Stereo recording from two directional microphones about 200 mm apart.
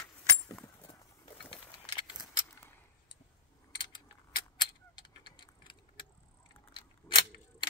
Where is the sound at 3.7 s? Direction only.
25° left (ahead or behind).